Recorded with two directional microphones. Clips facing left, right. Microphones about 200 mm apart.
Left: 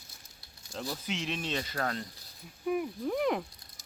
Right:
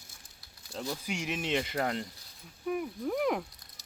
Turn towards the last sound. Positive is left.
turn(degrees=0)  # may be behind; listen again after turning